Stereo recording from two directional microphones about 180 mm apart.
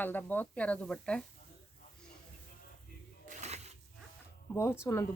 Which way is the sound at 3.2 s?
40° right (ahead or behind).